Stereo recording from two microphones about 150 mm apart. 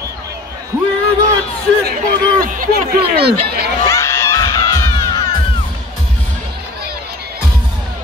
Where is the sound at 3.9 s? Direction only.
20° left (ahead or behind).